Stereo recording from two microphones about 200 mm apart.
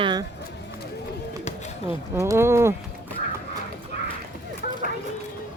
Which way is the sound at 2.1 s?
15° right (ahead or behind).